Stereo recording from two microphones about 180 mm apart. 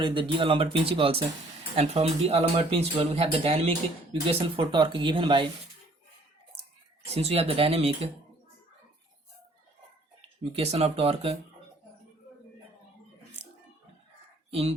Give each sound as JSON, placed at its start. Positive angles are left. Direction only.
{"t": 0.0, "sound": "speech", "side_deg": -25}
{"t": 7.1, "sound": "speech", "side_deg": -35}
{"t": 10.5, "sound": "speech", "side_deg": -35}
{"t": 14.5, "sound": "speech", "side_deg": -30}